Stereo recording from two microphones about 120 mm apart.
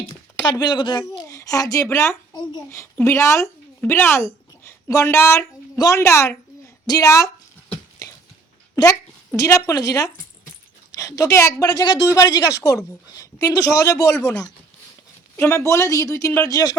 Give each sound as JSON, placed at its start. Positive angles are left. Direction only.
{"t": 0.5, "sound": "a child's voice", "side_deg": 35}
{"t": 2.3, "sound": "a child's voice", "side_deg": 35}
{"t": 2.6, "sound": "a woman's voice", "side_deg": 25}
{"t": 8.7, "sound": "a woman's voice", "side_deg": 25}